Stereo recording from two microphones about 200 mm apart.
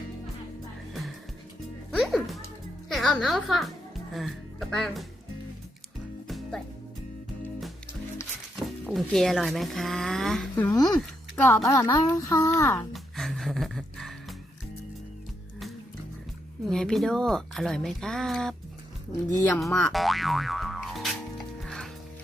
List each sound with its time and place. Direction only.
2.0 s music: centre (ahead or behind)
2.9 s a child's voice: centre (ahead or behind)
6.2 s music: centre (ahead or behind)
8.5 s speech: centre (ahead or behind)
10.5 s a woman's voice: 15° left (ahead or behind)
12.9 s music: centre (ahead or behind)
16.6 s a woman's voice: 5° left (ahead or behind)
19.5 s music: centre (ahead or behind)